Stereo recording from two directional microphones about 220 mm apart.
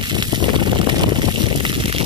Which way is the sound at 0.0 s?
20° right (ahead or behind).